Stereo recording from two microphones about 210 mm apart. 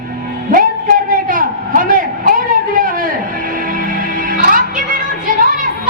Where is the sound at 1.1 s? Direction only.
40° right (ahead or behind).